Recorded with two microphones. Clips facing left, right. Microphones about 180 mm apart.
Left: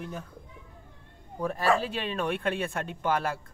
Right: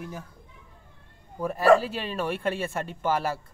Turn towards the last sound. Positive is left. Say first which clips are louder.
# right 2 dB
turn(degrees=-5)  # may be behind; listen again after turning